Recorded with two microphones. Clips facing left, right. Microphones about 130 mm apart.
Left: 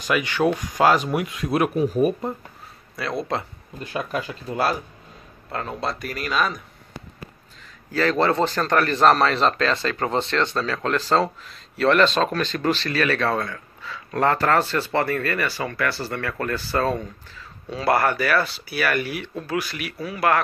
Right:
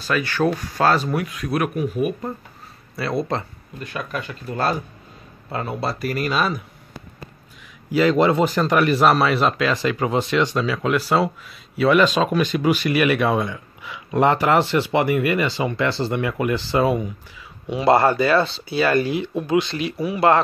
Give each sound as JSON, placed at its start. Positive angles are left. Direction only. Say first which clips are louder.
{"t": 0.0, "sound": "speech", "louder": "even", "side_deg": 15}
{"t": 3.0, "sound": "speech", "louder": "right 3 dB", "side_deg": 0}
{"t": 3.8, "sound": "speech", "louder": "left 2 dB", "side_deg": 30}
{"t": 5.5, "sound": "a man's voice", "louder": "right 2 dB", "side_deg": -5}
{"t": 7.9, "sound": "a man's voice", "louder": "right 4 dB", "side_deg": -15}